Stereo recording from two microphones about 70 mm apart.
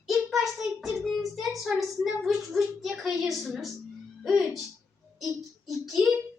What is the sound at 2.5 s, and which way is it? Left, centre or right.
A child's voice, centre.